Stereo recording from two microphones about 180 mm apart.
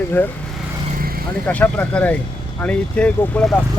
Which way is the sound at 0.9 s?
55° right (ahead or behind).